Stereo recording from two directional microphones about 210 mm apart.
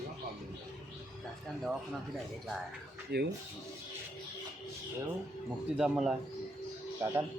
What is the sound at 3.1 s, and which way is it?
Speech, 50° right (ahead or behind).